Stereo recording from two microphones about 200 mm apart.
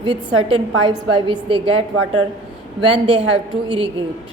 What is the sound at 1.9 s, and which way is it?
Speech, 90° right.